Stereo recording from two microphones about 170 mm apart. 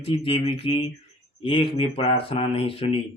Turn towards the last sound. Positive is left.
turn(degrees=35)  # may be behind; listen again after turning